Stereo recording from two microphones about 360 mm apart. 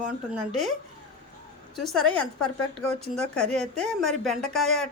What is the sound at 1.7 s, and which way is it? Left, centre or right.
A woman's voice, centre.